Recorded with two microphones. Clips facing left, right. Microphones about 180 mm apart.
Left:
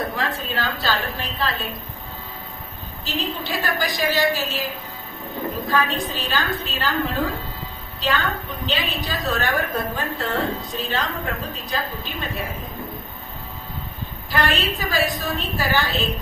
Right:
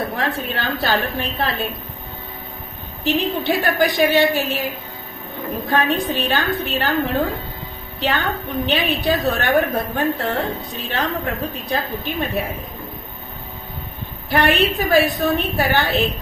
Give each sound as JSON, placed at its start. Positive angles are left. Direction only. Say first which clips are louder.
{"t": 0.2, "sound": "a woman's voice", "louder": "right 2 dB", "side_deg": -60}
{"t": 3.0, "sound": "a woman's voice", "louder": "right 7 dB", "side_deg": -60}
{"t": 5.7, "sound": "a woman's voice", "louder": "right 5 dB", "side_deg": -60}
{"t": 14.3, "sound": "a woman's voice", "louder": "right 6 dB", "side_deg": -60}